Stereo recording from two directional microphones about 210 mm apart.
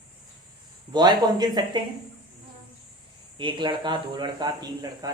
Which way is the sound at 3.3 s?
25° right (ahead or behind).